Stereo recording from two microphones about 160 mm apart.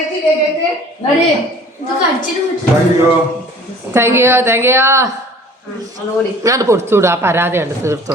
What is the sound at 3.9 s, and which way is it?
Speech, 15° right (ahead or behind).